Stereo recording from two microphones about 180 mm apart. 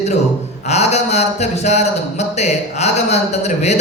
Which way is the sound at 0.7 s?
40° left (ahead or behind).